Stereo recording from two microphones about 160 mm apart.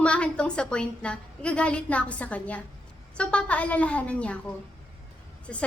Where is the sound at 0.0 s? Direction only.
5° left (ahead or behind).